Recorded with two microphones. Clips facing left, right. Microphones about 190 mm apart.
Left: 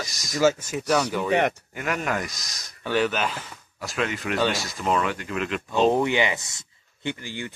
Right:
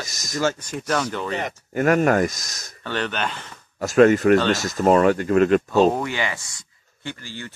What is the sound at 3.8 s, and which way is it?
Speech, 45° right (ahead or behind).